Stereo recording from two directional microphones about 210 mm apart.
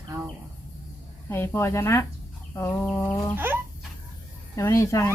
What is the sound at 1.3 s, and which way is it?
Speech, 10° left (ahead or behind).